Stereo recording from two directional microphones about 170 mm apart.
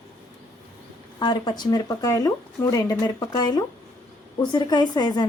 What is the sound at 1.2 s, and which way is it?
Speech, 25° left (ahead or behind).